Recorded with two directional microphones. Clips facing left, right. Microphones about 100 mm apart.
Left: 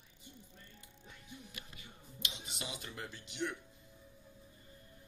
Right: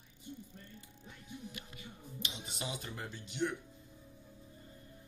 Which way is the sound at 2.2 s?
35° right (ahead or behind).